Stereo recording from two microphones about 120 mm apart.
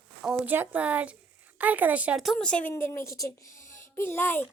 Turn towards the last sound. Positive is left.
turn(degrees=20)  # may be behind; listen again after turning